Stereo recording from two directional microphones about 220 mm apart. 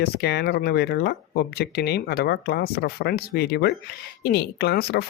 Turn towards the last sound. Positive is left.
turn(degrees=45)  # may be behind; listen again after turning